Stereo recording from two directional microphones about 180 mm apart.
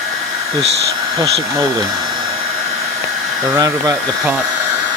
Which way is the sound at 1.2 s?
20° right (ahead or behind).